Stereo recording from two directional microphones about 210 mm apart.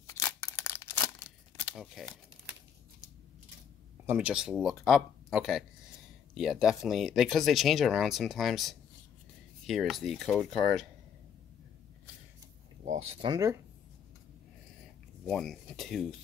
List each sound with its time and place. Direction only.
0.0 s a sound: 15° left (ahead or behind)
1.8 s speech: centre (ahead or behind)
4.0 s speech: 10° right (ahead or behind)
12.8 s speech: 30° right (ahead or behind)
15.2 s speech: centre (ahead or behind)